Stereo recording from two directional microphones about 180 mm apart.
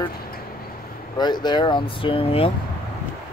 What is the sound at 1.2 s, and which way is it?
Speech, 25° left (ahead or behind).